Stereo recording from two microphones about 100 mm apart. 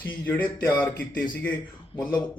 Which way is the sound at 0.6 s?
15° left (ahead or behind).